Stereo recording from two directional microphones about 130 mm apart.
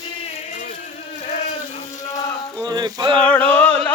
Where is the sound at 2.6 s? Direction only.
30° right (ahead or behind).